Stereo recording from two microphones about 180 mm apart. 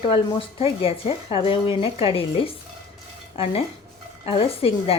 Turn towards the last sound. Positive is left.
turn(degrees=30)  # may be behind; listen again after turning